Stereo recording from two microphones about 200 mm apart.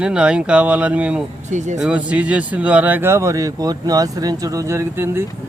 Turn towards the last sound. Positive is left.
turn(degrees=-15)  # may be behind; listen again after turning